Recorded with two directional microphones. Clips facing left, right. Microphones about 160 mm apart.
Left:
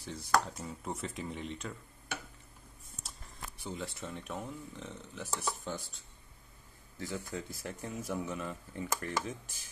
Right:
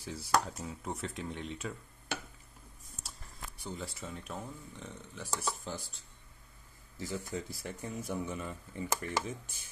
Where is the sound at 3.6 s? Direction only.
Centre (ahead or behind).